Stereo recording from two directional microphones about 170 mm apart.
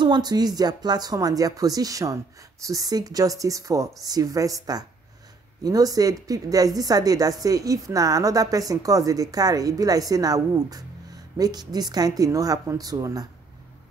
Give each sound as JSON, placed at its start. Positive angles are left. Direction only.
{"t": 0.0, "sound": "a woman's voice", "side_deg": -25}